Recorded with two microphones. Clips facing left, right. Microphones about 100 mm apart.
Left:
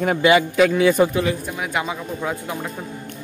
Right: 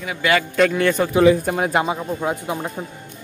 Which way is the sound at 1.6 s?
35° right (ahead or behind).